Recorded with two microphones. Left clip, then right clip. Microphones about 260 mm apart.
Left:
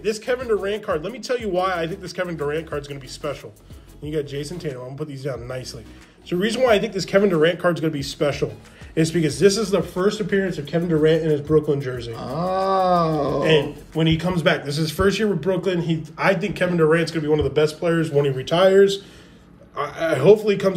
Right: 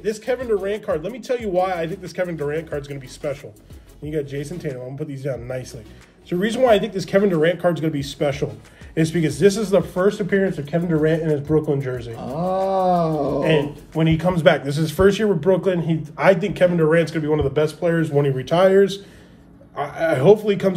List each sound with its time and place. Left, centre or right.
0.0 s speech: centre
12.4 s wild animals: left
13.4 s speech: centre